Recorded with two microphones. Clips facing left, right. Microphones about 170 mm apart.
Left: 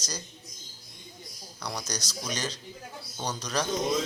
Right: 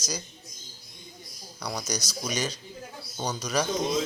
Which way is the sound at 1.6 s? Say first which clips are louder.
Right 3 dB; 10° right (ahead or behind).